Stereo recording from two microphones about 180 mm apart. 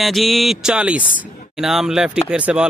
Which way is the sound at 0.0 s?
Centre (ahead or behind).